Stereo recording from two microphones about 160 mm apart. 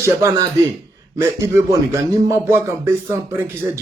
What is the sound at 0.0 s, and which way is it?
A man's voice, 15° right (ahead or behind).